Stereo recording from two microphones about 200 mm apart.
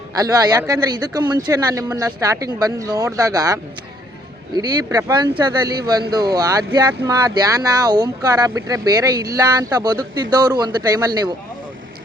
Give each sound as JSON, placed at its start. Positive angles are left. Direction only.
{"t": 0.2, "sound": "speech", "side_deg": -20}